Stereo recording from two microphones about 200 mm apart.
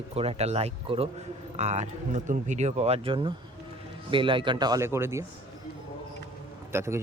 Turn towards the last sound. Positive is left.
turn(degrees=-15)  # may be behind; listen again after turning